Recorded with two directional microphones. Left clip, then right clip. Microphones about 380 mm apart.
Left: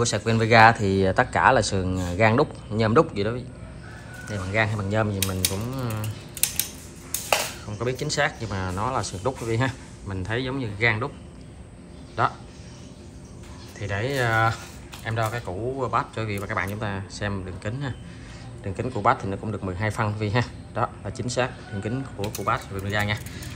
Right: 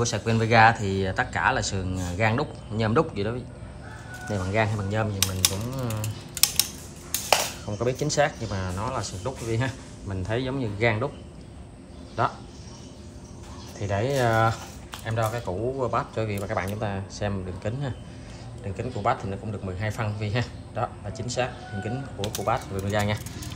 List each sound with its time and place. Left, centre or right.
0.0 s speech: centre
7.2 s speech: centre
13.7 s speech: centre